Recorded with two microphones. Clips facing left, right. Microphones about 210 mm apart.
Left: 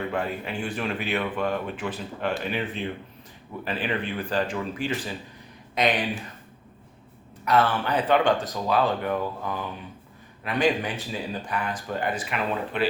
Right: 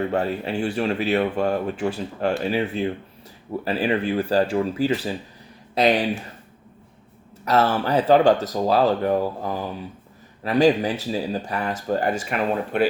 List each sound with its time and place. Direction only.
0.0 s speech: 40° right (ahead or behind)
7.4 s speech: 40° right (ahead or behind)